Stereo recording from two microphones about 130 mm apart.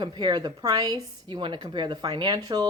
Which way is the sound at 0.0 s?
35° right (ahead or behind).